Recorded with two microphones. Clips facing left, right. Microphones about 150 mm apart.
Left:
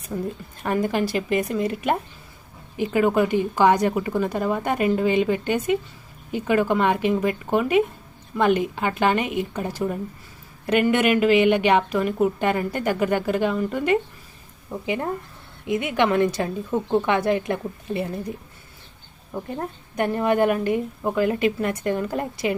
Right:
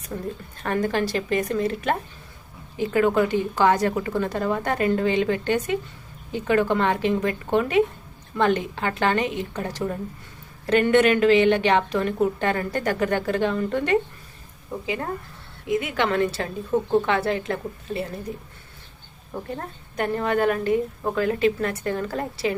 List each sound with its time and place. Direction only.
0.1 s a woman's voice: 5° left (ahead or behind)
15.7 s a woman's voice: 20° left (ahead or behind)
19.5 s a woman's voice: 15° left (ahead or behind)